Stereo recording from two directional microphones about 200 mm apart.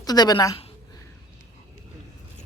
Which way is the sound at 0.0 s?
20° left (ahead or behind).